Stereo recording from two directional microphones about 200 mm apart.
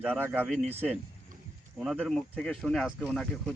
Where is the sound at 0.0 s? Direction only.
5° right (ahead or behind).